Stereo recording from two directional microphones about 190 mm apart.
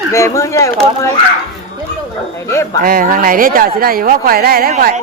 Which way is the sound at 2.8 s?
50° right (ahead or behind).